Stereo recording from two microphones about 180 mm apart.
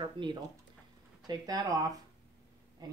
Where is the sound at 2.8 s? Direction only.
20° right (ahead or behind).